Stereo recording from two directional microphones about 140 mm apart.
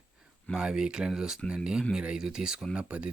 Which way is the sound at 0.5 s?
5° right (ahead or behind).